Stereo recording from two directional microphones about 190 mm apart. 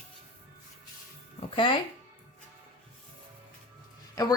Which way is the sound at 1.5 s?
25° left (ahead or behind).